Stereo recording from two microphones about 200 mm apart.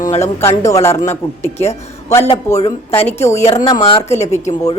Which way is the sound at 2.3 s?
15° left (ahead or behind).